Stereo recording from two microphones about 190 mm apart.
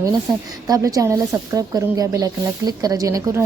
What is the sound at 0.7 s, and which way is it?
Speech, 20° right (ahead or behind).